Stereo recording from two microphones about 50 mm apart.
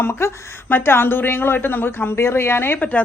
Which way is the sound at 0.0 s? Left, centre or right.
Left.